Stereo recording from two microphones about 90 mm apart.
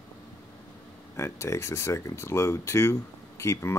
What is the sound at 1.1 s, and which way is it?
Speech, 30° left (ahead or behind).